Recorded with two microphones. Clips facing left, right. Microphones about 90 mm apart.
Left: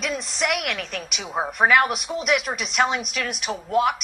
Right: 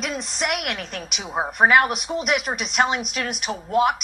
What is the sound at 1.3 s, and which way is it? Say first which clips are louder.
Speech: right 1 dB; 10° right (ahead or behind).